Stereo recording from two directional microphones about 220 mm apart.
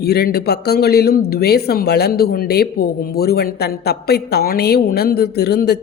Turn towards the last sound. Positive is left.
turn(degrees=45)  # may be behind; listen again after turning